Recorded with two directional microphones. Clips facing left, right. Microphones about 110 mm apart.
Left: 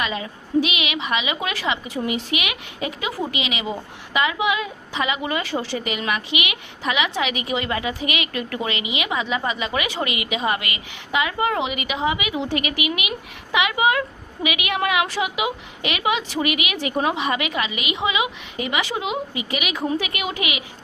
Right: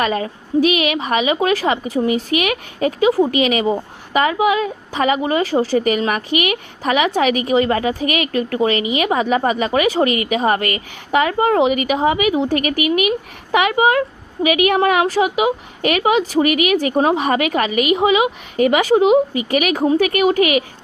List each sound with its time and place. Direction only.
0.0 s a woman's voice: 45° right (ahead or behind)